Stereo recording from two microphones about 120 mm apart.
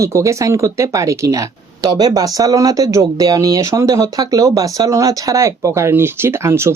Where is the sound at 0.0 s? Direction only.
25° right (ahead or behind).